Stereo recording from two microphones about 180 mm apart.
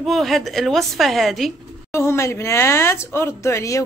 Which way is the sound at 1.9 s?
15° left (ahead or behind).